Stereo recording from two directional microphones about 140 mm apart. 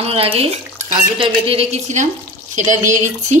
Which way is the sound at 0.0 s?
45° right (ahead or behind).